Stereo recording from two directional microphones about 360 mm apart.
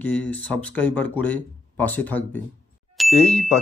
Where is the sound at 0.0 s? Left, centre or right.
Centre.